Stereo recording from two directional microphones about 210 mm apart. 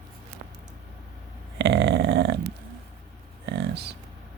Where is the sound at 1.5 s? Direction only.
50° right (ahead or behind).